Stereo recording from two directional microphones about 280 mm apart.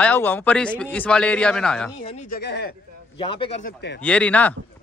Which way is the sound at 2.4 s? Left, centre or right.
Left.